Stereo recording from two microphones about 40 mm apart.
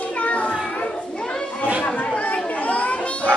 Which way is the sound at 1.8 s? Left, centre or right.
Left.